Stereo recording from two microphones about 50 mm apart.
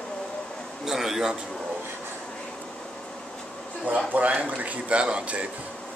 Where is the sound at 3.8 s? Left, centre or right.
Right.